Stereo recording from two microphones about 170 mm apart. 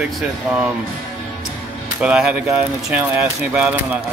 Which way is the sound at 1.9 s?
5° right (ahead or behind).